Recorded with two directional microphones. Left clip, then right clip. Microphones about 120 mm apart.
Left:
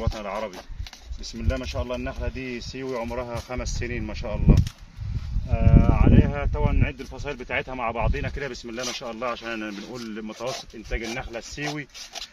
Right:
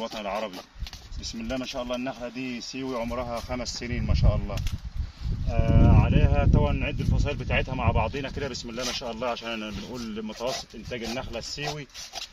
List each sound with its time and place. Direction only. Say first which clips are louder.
0.0 s speech: even; 20° left (ahead or behind)
5.5 s speech: left 1 dB; 15° left (ahead or behind); by 11.6 s 40° left (ahead or behind)